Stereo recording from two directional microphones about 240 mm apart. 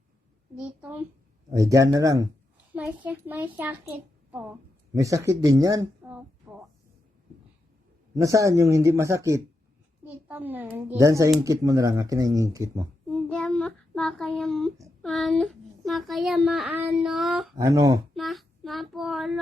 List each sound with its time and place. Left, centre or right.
0.8 s a child's voice: centre
6.5 s a sound: centre
8.1 s a child's voice: centre
13.1 s a child's voice: centre
17.5 s a child's voice: centre
18.1 s child singing: centre